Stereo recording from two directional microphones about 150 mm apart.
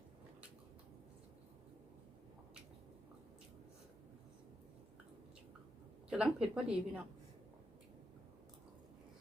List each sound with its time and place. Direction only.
6.1 s speech: 5° right (ahead or behind)